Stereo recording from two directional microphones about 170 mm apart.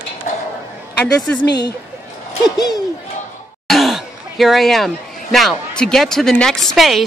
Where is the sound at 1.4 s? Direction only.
80° left.